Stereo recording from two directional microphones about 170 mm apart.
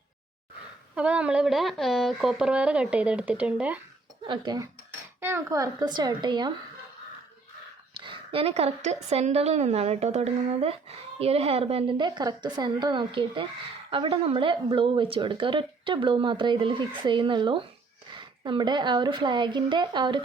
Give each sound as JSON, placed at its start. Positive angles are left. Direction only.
{"t": 0.9, "sound": "speech", "side_deg": -5}
{"t": 4.3, "sound": "speech", "side_deg": -25}
{"t": 7.9, "sound": "a woman's voice", "side_deg": -30}